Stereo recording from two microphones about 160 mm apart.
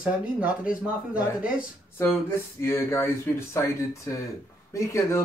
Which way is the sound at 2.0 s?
15° left (ahead or behind).